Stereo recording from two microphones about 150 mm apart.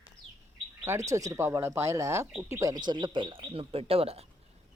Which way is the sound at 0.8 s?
20° right (ahead or behind).